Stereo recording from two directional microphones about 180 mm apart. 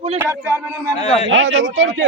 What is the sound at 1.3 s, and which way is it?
Speech, 90° right.